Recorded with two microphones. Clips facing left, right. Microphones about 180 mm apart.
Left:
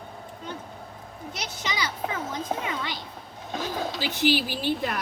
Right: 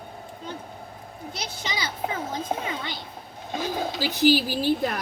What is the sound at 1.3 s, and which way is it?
A child's voice, 30° right (ahead or behind).